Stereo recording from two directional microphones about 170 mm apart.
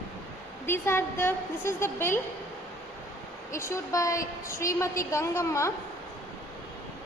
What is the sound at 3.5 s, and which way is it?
A woman's voice, 15° left (ahead or behind).